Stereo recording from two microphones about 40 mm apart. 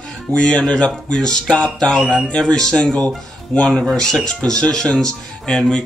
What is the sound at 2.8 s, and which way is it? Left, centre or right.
Speech, left.